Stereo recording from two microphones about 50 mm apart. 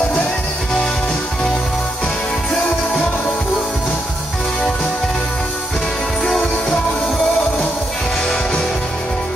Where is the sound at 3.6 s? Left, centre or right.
Centre.